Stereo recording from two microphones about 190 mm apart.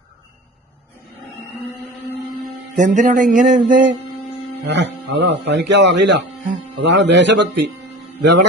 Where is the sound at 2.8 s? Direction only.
40° right (ahead or behind).